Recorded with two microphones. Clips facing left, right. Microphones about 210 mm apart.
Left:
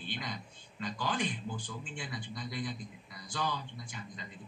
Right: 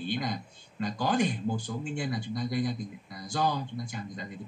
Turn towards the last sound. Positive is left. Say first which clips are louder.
# right 9 dB
turn(degrees=-45)  # may be behind; listen again after turning